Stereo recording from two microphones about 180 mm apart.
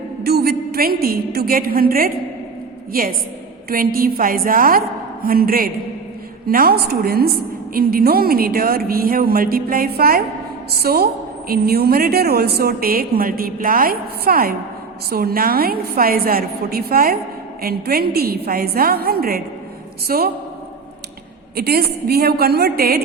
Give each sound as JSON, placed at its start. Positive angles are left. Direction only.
{"t": 0.2, "sound": "a woman's voice", "side_deg": -60}
{"t": 21.5, "sound": "a woman's voice", "side_deg": -60}